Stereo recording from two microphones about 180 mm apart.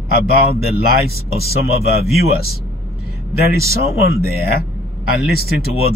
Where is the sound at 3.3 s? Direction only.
60° left (ahead or behind).